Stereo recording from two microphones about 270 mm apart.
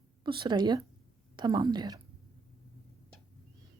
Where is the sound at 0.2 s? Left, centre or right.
Centre.